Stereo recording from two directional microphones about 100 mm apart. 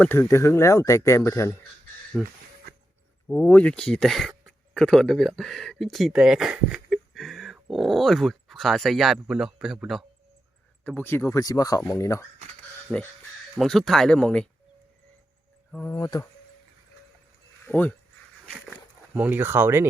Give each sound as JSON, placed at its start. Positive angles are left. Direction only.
{"t": 0.1, "sound": "speech", "side_deg": 25}
{"t": 2.1, "sound": "speech", "side_deg": -5}
{"t": 3.2, "sound": "speech", "side_deg": 20}
{"t": 10.8, "sound": "speech", "side_deg": 20}
{"t": 12.9, "sound": "speech", "side_deg": 5}
{"t": 15.7, "sound": "speech", "side_deg": 20}
{"t": 16.0, "sound": "speech", "side_deg": 45}
{"t": 17.7, "sound": "speech", "side_deg": 15}
{"t": 18.5, "sound": "a sound", "side_deg": 0}
{"t": 19.1, "sound": "speech", "side_deg": -15}